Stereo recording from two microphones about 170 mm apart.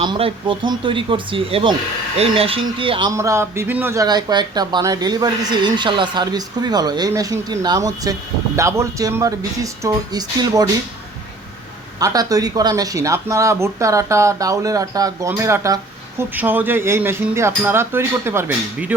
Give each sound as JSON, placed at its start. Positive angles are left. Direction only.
{"t": 0.0, "sound": "speech", "side_deg": -30}
{"t": 3.1, "sound": "speech", "side_deg": -15}
{"t": 11.9, "sound": "speech", "side_deg": -20}